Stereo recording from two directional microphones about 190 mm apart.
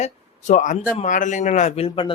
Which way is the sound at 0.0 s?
40° left (ahead or behind).